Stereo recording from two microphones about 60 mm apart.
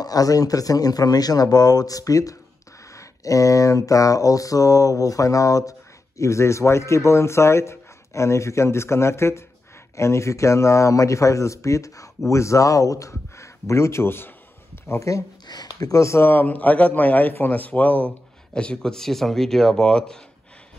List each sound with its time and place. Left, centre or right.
0.0 s speech: left
2.9 s a sound: left
12.3 s speech: left
14.9 s speech: left
16.3 s a man's voice: left
18.5 s speech: centre